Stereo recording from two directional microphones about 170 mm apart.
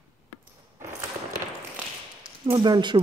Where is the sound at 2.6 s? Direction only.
25° right (ahead or behind).